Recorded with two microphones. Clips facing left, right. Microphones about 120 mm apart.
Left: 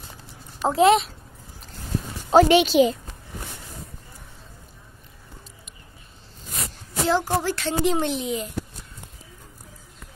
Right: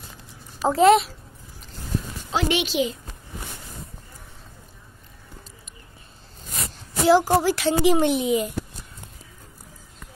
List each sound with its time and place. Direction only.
0.6 s a child's voice: centre (ahead or behind)
2.3 s a woman's voice: 35° left (ahead or behind)
7.1 s speech: 5° right (ahead or behind)